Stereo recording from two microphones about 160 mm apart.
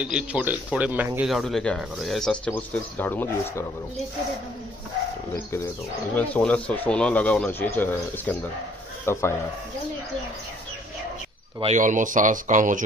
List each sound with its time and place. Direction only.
0.0 s speech: 5° right (ahead or behind); by 3.6 s 10° left (ahead or behind)
5.3 s speech: 20° left (ahead or behind)
6.1 s a man's voice: 10° left (ahead or behind)
11.6 s speech: 50° right (ahead or behind)